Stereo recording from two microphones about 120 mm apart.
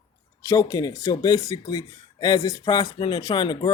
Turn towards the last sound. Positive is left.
turn(degrees=40)  # may be behind; listen again after turning